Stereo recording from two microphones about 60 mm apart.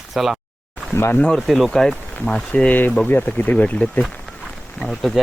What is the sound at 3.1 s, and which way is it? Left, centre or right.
Speech, left.